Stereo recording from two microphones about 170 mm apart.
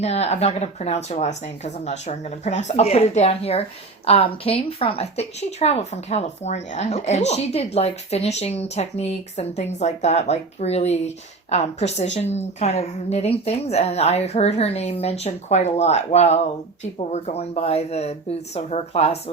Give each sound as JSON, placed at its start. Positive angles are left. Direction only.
{"t": 0.0, "sound": "a woman's voice", "side_deg": 40}